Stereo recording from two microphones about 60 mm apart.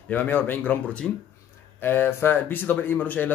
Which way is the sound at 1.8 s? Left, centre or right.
Left.